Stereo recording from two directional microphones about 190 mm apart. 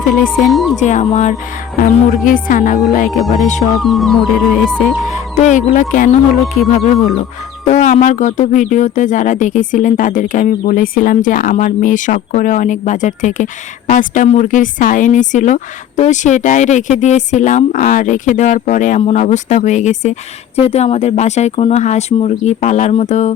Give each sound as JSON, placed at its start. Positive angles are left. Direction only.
{"t": 0.4, "sound": "music", "side_deg": 0}
{"t": 0.8, "sound": "speech", "side_deg": 40}
{"t": 3.1, "sound": "music", "side_deg": 0}
{"t": 3.4, "sound": "speech", "side_deg": 40}
{"t": 3.8, "sound": "music", "side_deg": 0}
{"t": 5.0, "sound": "speech", "side_deg": 40}